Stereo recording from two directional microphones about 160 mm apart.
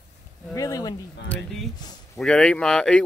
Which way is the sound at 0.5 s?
20° left (ahead or behind).